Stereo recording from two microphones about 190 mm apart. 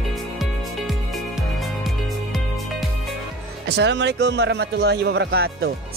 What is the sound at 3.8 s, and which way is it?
Speech, 65° right (ahead or behind).